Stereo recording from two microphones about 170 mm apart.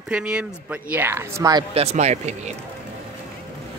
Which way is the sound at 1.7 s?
40° right (ahead or behind).